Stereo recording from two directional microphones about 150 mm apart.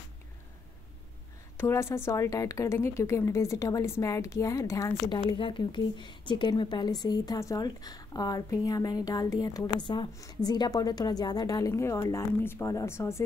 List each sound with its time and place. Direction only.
1.6 s a woman's voice: 15° left (ahead or behind)
5.4 s a woman's voice: 35° left (ahead or behind); by 13.2 s 15° left (ahead or behind)